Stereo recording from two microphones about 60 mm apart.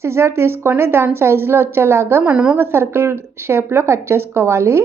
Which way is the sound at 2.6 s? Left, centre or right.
Right.